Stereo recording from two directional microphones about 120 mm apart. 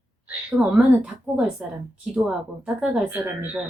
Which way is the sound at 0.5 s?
Centre (ahead or behind).